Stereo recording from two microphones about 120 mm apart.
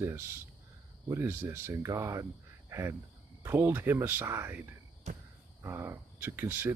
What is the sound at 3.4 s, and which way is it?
Speech, 20° right (ahead or behind).